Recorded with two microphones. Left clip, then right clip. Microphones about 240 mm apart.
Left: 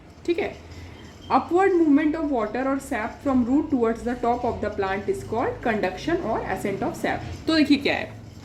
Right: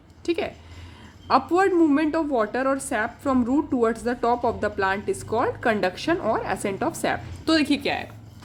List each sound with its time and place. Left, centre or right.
0.3 s a woman's voice: right